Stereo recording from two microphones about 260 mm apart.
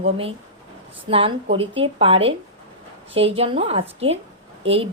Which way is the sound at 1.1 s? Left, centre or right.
Right.